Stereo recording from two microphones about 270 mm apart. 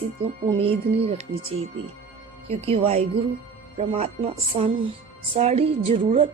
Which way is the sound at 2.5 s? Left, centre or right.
Right.